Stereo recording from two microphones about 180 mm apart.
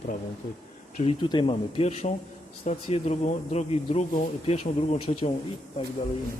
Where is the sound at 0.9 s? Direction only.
35° left (ahead or behind).